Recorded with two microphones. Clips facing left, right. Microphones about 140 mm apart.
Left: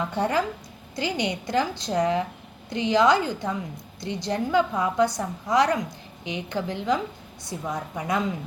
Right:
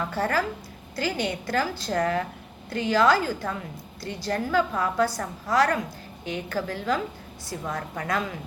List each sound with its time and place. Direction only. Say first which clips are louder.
0.0 s a woman's voice: left 1 dB; 20° left (ahead or behind)